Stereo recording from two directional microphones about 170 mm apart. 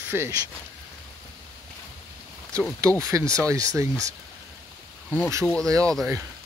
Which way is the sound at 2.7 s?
20° right (ahead or behind).